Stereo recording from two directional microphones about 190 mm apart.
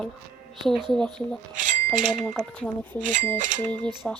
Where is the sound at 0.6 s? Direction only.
Centre (ahead or behind).